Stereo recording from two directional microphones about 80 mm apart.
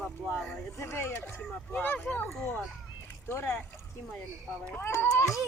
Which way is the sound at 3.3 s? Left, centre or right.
Left.